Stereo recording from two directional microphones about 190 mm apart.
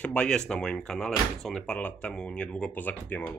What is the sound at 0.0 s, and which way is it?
Speech, 5° left (ahead or behind).